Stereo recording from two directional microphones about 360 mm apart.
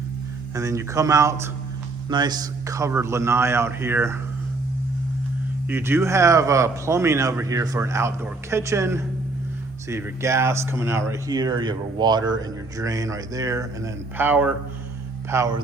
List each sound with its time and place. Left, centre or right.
0.5 s speech: centre
5.6 s speech: centre